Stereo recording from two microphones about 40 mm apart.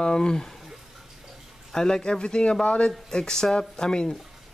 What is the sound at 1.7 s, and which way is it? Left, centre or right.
Speech, centre.